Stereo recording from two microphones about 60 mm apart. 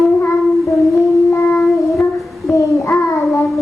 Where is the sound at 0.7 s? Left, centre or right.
Left.